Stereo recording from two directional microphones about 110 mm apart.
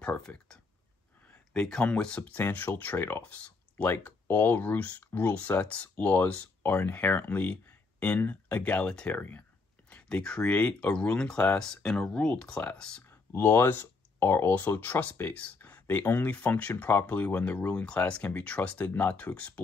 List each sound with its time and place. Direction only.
0.0 s speech: 10° left (ahead or behind)
13.3 s speech: 20° left (ahead or behind)